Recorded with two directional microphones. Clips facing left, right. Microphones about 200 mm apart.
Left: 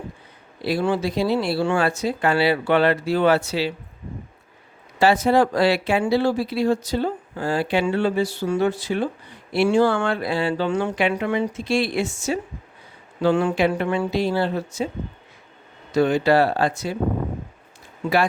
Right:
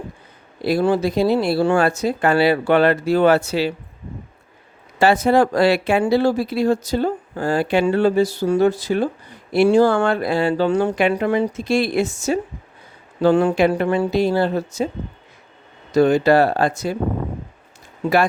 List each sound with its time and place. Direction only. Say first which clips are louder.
0.6 s speech: right 4 dB; 45° right (ahead or behind)
4.9 s speech: right 2 dB; 50° right (ahead or behind)
15.9 s speech: right 4 dB; 40° right (ahead or behind)